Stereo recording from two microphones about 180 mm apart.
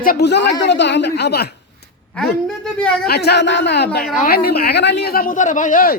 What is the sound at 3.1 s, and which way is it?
Speech, 65° left (ahead or behind).